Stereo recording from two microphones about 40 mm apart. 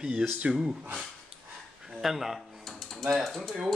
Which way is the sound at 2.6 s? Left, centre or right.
Centre.